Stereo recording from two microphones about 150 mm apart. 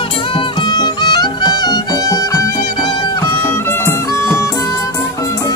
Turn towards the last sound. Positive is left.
turn(degrees=20)  # may be behind; listen again after turning